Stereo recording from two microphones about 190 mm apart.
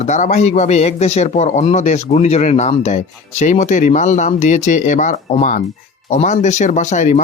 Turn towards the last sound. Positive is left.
turn(degrees=40)  # may be behind; listen again after turning